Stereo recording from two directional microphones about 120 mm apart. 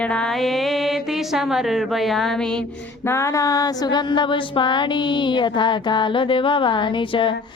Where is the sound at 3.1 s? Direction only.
25° left (ahead or behind); by 7.3 s 45° left (ahead or behind).